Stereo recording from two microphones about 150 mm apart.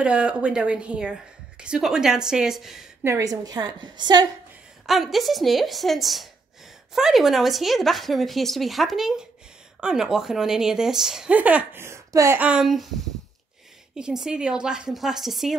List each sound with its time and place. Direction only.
0.0 s speech: 5° right (ahead or behind)
3.0 s a woman's voice: 20° right (ahead or behind)
4.8 s speech: centre (ahead or behind); by 12.4 s 20° right (ahead or behind)
12.4 s speech: 5° right (ahead or behind)
13.9 s speech: 5° right (ahead or behind)